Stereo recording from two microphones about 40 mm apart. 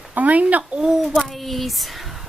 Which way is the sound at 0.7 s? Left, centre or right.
Centre.